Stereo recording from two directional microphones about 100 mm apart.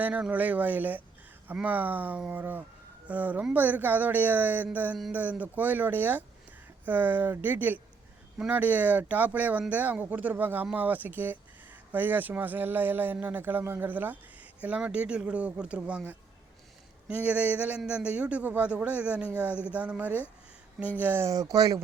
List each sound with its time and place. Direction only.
0.0 s speech: 15° right (ahead or behind)
21.2 s speech: 40° right (ahead or behind)